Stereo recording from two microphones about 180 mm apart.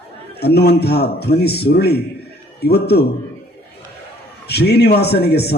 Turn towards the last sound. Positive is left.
turn(degrees=65)  # may be behind; listen again after turning